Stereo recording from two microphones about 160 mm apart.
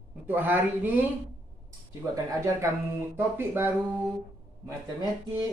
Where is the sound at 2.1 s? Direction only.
20° right (ahead or behind).